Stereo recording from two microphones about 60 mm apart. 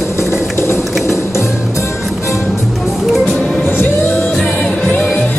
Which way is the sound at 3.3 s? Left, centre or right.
Centre.